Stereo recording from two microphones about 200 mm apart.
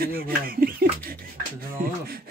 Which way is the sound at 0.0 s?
45° right (ahead or behind).